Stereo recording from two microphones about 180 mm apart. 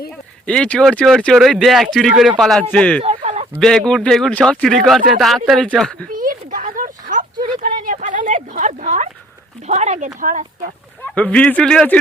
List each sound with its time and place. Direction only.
0.4 s a man's voice: 5° left (ahead or behind)
3.2 s chicken: 40° right (ahead or behind)
3.6 s a man's voice: 5° left (ahead or behind)
6.1 s a sound: 50° right (ahead or behind)
9.6 s speech: 40° right (ahead or behind)
11.0 s speech: 10° left (ahead or behind)